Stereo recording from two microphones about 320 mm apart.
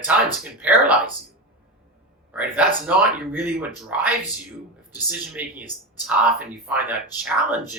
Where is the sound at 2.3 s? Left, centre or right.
Centre.